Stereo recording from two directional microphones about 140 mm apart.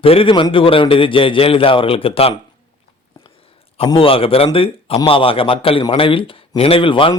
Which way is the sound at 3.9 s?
40° left (ahead or behind).